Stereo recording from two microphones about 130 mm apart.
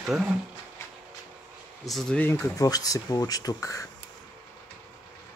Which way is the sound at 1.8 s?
Centre (ahead or behind).